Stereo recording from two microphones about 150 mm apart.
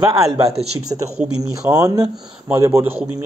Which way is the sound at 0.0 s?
25° right (ahead or behind).